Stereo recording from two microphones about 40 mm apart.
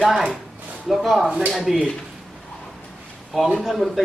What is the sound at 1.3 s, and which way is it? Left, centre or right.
Speech, centre.